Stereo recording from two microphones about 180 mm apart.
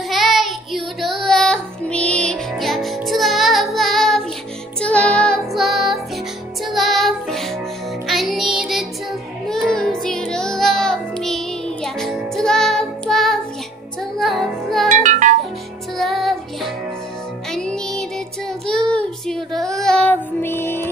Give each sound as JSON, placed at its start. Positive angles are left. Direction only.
{"t": 0.1, "sound": "child singing", "side_deg": 0}
{"t": 2.0, "sound": "music", "side_deg": 5}
{"t": 14.9, "sound": "music", "side_deg": -45}
{"t": 16.0, "sound": "music", "side_deg": 0}
{"t": 18.7, "sound": "child singing", "side_deg": 5}
{"t": 19.7, "sound": "music", "side_deg": 5}